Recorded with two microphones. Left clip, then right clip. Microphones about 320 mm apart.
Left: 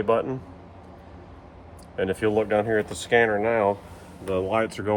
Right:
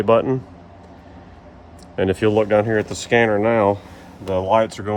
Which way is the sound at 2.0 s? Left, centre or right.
Right.